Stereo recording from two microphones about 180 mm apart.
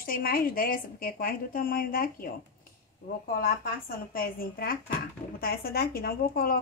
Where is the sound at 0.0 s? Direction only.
55° left (ahead or behind).